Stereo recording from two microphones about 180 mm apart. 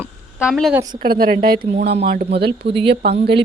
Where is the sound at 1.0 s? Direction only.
55° right (ahead or behind).